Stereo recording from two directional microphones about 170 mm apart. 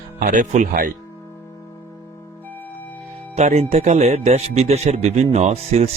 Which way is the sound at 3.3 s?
40° right (ahead or behind).